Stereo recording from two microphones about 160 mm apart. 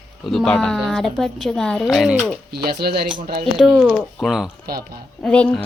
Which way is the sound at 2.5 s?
80° right.